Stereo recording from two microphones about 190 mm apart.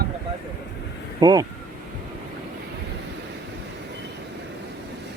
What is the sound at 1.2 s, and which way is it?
Speech, 20° right (ahead or behind).